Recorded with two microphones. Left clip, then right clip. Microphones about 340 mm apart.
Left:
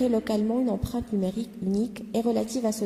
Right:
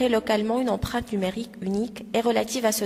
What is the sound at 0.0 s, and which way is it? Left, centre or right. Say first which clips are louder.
A woman's voice: right 3 dB; right.